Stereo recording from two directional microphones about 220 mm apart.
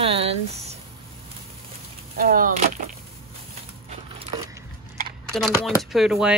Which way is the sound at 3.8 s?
25° right (ahead or behind).